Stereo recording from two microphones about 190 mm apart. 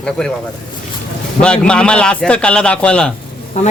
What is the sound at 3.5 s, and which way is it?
Speech, 35° left (ahead or behind).